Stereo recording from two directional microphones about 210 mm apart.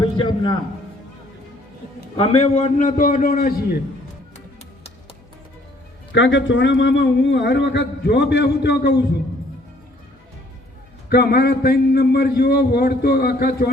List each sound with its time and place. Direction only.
0.0 s music: 25° left (ahead or behind)
2.1 s a man's voice: 30° left (ahead or behind); by 3.8 s 45° left (ahead or behind)
6.1 s a man's voice: 60° left (ahead or behind)
11.1 s a man's voice: 45° left (ahead or behind)